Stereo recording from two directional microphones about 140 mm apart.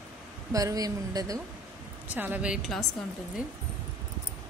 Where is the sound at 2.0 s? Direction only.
10° right (ahead or behind).